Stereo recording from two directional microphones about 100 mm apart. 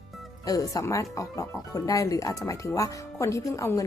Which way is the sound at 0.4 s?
35° left (ahead or behind).